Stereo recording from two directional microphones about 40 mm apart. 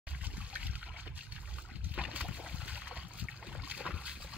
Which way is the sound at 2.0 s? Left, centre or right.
Right.